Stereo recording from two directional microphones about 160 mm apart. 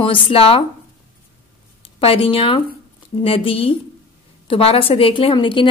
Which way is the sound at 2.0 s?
35° left (ahead or behind).